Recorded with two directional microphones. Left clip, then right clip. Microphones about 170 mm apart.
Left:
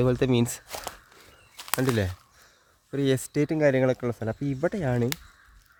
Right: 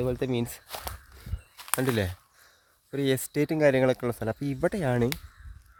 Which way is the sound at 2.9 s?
5° right (ahead or behind).